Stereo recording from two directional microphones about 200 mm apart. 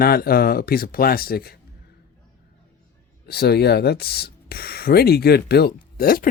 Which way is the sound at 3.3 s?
55° left (ahead or behind).